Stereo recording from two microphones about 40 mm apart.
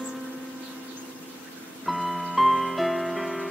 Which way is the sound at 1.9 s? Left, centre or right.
Centre.